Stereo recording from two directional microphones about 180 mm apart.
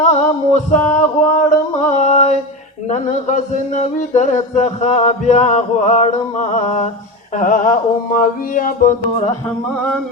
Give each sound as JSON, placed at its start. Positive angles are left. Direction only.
{"t": 0.0, "sound": "a sound", "side_deg": 40}
{"t": 2.9, "sound": "speech", "side_deg": 40}
{"t": 7.3, "sound": "mantra", "side_deg": 45}
{"t": 9.7, "sound": "music", "side_deg": 5}